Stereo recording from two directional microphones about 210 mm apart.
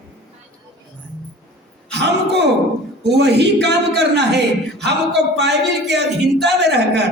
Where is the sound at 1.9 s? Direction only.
55° right (ahead or behind).